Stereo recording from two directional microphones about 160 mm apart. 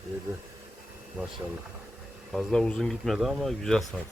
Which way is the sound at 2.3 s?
Centre (ahead or behind).